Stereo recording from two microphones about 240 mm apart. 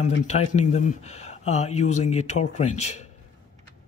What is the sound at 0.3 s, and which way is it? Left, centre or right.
Speech, left.